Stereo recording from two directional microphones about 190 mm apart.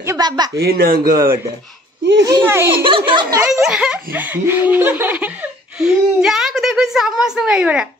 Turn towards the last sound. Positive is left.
turn(degrees=-5)  # may be behind; listen again after turning